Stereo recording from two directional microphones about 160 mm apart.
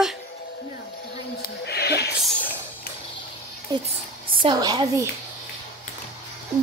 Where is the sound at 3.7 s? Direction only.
25° right (ahead or behind).